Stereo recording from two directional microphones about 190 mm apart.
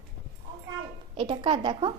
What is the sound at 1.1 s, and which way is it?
Speech, 25° right (ahead or behind).